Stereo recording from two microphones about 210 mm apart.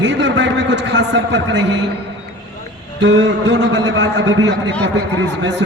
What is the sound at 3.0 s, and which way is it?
A man's voice, 55° right (ahead or behind).